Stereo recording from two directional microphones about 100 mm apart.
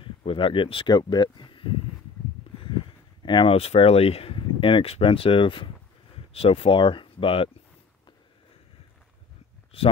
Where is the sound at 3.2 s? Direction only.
50° left (ahead or behind).